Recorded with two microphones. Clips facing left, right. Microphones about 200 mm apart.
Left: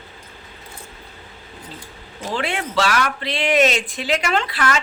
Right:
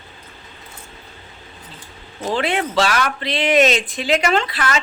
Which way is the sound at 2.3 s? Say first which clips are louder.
Right 3 dB; 25° right (ahead or behind).